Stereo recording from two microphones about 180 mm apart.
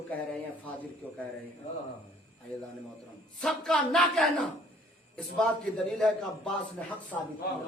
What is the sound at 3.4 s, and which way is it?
A man's voice, 5° left (ahead or behind).